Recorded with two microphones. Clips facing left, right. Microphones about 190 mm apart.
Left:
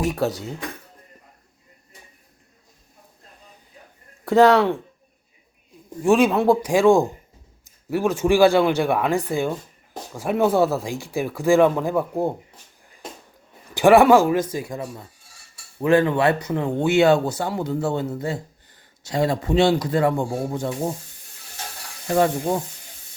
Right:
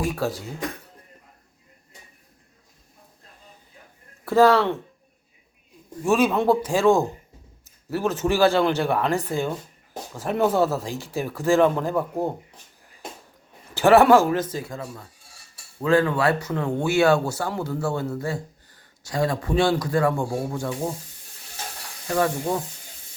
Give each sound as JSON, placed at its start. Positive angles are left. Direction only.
{"t": 0.0, "sound": "speech", "side_deg": 20}
{"t": 4.3, "sound": "speech", "side_deg": 15}
{"t": 6.2, "sound": "speech", "side_deg": 10}
{"t": 13.7, "sound": "speech", "side_deg": 10}
{"t": 22.0, "sound": "speech", "side_deg": 25}